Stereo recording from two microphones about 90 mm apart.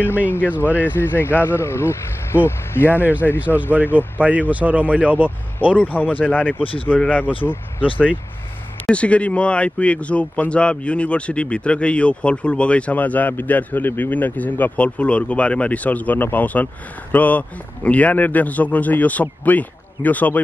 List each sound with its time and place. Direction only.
0.3 s speech: 20° left (ahead or behind)
3.2 s speech: 10° left (ahead or behind)
3.9 s speech: 15° right (ahead or behind)
5.8 s speech: 20° left (ahead or behind)
7.8 s speech: 15° right (ahead or behind)
8.8 s speech: 15° left (ahead or behind)